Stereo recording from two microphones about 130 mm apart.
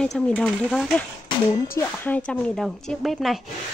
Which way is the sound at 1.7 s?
10° left (ahead or behind).